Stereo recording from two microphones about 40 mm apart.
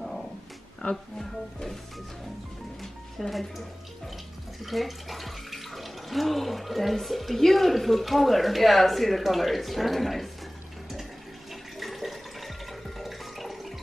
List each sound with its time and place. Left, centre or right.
0.8 s speech: left
2.8 s speech: centre
11.8 s toilet flush: centre